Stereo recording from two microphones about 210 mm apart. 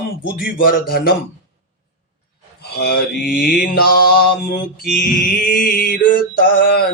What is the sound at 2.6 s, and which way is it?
Speech, 50° left (ahead or behind).